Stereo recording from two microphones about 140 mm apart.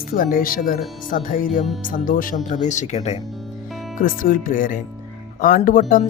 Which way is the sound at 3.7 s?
Centre (ahead or behind).